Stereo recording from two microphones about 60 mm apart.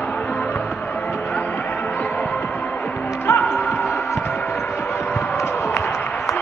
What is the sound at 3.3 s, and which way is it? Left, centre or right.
Music, left.